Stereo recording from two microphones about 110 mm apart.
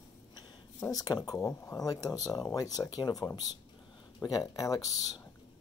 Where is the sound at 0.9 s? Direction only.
35° left (ahead or behind).